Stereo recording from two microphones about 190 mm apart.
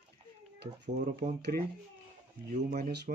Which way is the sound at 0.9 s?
40° right (ahead or behind).